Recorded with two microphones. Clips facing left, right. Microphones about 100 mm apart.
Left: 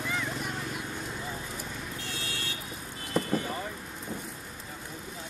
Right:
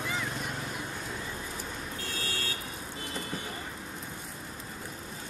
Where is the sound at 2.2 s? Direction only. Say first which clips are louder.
Right 1 dB; 45° right (ahead or behind).